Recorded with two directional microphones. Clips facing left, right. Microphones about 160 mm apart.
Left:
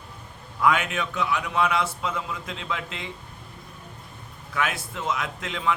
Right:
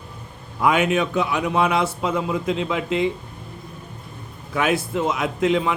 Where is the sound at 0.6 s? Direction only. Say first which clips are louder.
Right 5 dB; 15° right (ahead or behind).